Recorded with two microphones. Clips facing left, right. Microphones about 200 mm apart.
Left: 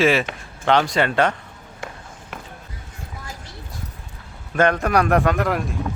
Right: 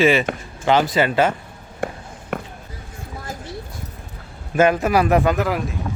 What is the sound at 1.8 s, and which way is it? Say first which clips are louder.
Walk: right 9 dB; 55° right (ahead or behind).